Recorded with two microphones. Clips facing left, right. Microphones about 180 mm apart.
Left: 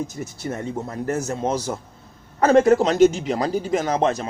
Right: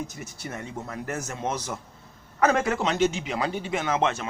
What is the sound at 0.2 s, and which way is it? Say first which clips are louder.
Speech: left 7 dB; 35° left (ahead or behind).